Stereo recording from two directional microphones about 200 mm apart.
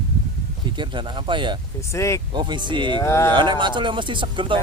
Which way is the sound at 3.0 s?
15° left (ahead or behind).